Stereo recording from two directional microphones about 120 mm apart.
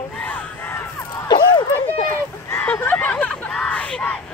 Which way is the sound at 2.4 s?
20° left (ahead or behind).